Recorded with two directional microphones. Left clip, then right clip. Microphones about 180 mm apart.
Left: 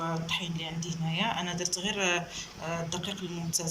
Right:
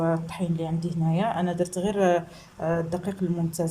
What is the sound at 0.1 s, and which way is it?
Speech, 55° right (ahead or behind).